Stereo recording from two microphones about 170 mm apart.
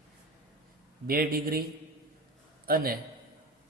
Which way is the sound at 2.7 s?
60° right (ahead or behind).